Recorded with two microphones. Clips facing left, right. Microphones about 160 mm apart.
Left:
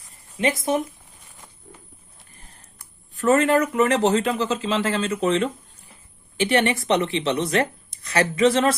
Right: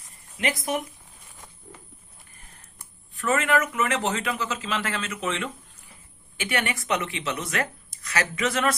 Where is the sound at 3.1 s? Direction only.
40° left (ahead or behind).